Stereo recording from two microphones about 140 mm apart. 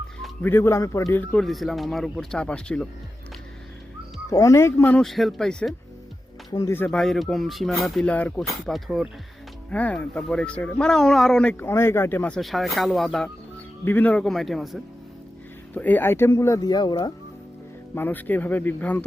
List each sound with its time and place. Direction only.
0.4 s speech: 20° left (ahead or behind)
1.2 s speech: 5° left (ahead or behind)
4.3 s speech: 20° left (ahead or behind); by 5.7 s 5° left (ahead or behind)
6.5 s speech: 20° left (ahead or behind)
7.0 s speech: centre (ahead or behind)
11.6 s speech: 15° left (ahead or behind)
12.4 s speech: centre (ahead or behind)
13.8 s speech: 10° left (ahead or behind)
15.7 s speech: 10° left (ahead or behind); by 17.1 s 30° left (ahead or behind)
17.9 s speech: 15° left (ahead or behind)